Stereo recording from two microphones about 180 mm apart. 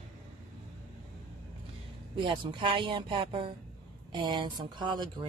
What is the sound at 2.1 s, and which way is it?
Speech, 25° right (ahead or behind).